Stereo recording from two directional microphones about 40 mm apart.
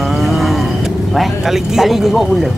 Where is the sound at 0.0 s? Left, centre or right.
Centre.